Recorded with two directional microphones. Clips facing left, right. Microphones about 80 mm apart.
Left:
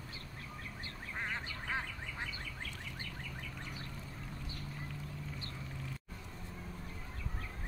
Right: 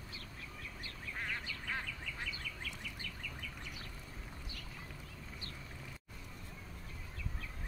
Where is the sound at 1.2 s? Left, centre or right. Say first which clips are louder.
Left 2 dB; left.